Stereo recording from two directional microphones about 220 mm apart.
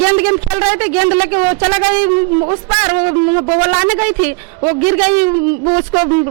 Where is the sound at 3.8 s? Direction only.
15° right (ahead or behind).